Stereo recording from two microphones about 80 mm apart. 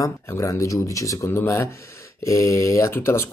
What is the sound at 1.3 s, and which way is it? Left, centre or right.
Speech, left.